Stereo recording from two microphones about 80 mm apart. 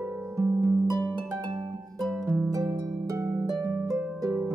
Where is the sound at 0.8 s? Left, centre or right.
Right.